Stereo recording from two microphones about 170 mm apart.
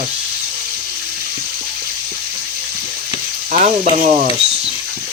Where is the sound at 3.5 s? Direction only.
50° right (ahead or behind).